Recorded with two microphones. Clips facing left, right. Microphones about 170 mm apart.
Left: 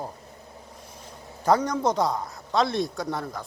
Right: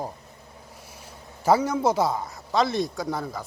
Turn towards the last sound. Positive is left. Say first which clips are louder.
# right 1 dB
turn(degrees=0)  # may be behind; listen again after turning